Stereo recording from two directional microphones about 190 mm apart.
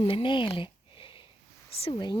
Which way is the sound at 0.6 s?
25° left (ahead or behind).